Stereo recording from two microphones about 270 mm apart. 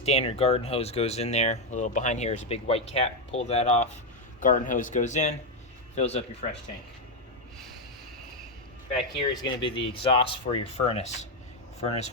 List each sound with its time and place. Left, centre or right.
0.0 s speech: left
8.9 s speech: centre